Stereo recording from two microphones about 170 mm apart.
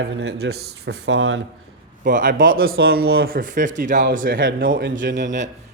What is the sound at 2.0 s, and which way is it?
Speech, 55° right (ahead or behind).